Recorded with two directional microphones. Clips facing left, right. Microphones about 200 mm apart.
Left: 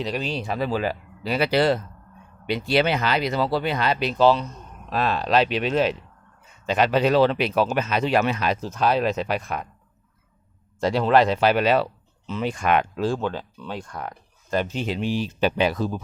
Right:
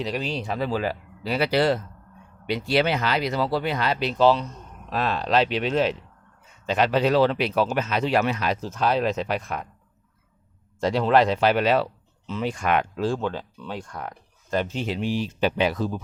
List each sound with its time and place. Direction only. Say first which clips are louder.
0.0 s speech: left 1 dB; centre (ahead or behind); by 4.1 s 20° left (ahead or behind)
4.2 s speech: left 1 dB; centre (ahead or behind)
10.8 s speech: left 1 dB; 5° left (ahead or behind); by 13.1 s 20° left (ahead or behind)
13.1 s speech: left 1 dB; 5° left (ahead or behind); by 15.3 s 25° left (ahead or behind)
15.4 s speech: left 1 dB; 45° left (ahead or behind)